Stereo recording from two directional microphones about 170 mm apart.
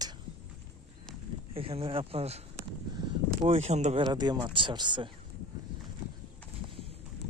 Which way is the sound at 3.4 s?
40° right (ahead or behind).